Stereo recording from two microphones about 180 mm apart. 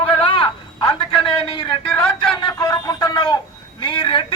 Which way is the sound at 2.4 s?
25° left (ahead or behind).